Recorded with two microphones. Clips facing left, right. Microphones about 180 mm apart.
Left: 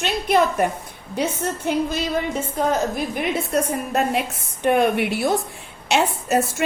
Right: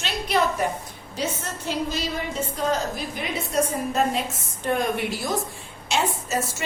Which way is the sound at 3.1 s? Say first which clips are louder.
Left 1 dB; 60° left (ahead or behind).